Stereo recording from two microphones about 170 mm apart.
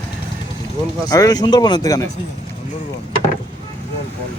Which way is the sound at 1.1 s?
20° left (ahead or behind).